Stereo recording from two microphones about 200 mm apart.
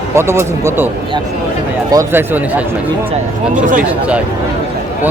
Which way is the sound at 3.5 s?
40° right (ahead or behind).